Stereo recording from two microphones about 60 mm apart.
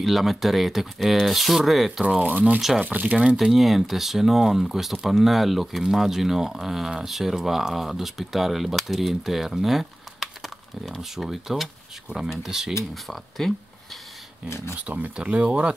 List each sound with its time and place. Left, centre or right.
0.0 s speech: centre
2.2 s speech: right
3.3 s speech: centre
12.9 s speech: centre
14.8 s speech: right